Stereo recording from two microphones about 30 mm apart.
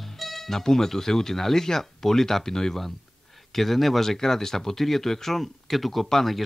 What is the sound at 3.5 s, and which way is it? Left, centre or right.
Speech, centre.